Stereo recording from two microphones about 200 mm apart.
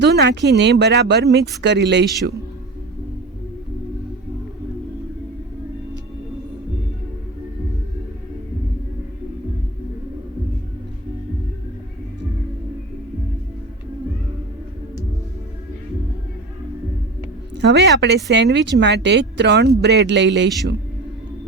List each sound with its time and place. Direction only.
0.0 s speech: 60° right (ahead or behind)
17.6 s speech: 60° right (ahead or behind)